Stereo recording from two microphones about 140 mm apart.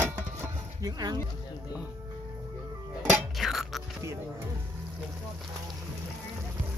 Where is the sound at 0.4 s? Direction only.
25° right (ahead or behind).